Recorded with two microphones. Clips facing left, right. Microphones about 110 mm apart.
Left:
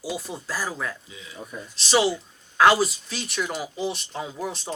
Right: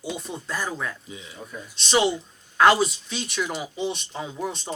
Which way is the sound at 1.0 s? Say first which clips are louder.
Right 3 dB; 25° right (ahead or behind).